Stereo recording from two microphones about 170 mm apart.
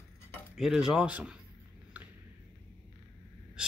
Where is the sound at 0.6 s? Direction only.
5° right (ahead or behind).